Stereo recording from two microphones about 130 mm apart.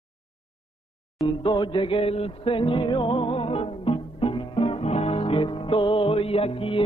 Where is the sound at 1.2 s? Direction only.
35° left (ahead or behind).